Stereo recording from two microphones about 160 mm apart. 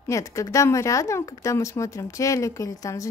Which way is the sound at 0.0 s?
20° left (ahead or behind).